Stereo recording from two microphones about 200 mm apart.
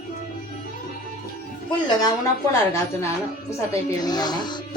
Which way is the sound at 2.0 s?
20° left (ahead or behind).